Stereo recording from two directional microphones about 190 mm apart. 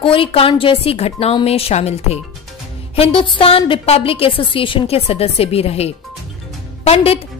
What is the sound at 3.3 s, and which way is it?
A woman's voice, 30° left (ahead or behind).